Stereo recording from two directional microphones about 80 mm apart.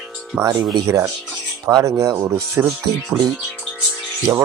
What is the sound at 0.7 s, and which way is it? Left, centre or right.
Speech, right.